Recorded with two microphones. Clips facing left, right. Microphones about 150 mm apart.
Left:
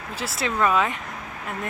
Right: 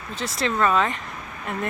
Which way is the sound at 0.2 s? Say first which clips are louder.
Right 1 dB; 5° left (ahead or behind).